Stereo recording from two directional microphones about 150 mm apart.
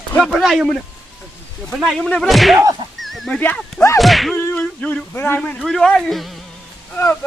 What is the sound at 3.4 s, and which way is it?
Speech, 10° left (ahead or behind).